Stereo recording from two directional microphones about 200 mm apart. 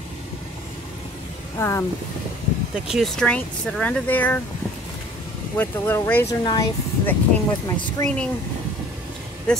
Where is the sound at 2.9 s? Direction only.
Centre (ahead or behind).